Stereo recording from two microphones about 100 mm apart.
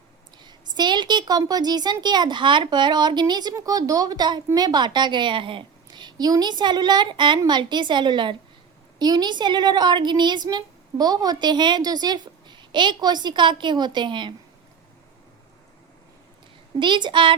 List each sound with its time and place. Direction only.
0.4 s a woman's voice: 45° right (ahead or behind)
16.8 s a woman's voice: 50° right (ahead or behind)